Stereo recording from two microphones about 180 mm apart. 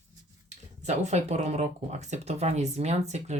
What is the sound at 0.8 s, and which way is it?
Speech, 40° right (ahead or behind).